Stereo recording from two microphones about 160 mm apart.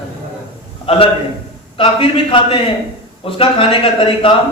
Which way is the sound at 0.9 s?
35° left (ahead or behind).